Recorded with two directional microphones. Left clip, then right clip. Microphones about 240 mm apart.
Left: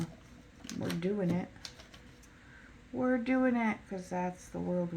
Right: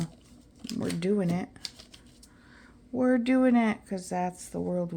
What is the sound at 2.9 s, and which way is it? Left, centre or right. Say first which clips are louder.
Speech: right 6 dB; right.